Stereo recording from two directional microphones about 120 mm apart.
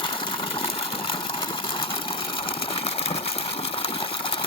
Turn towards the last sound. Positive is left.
turn(degrees=50)  # may be behind; listen again after turning